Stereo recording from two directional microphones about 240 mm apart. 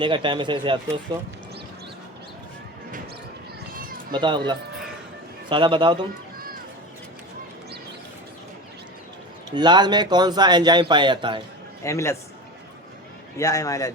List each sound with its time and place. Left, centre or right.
0.0 s speech: centre
4.1 s speech: centre
5.5 s speech: centre
9.6 s speech: centre
11.8 s a man's voice: centre
13.3 s a man's voice: centre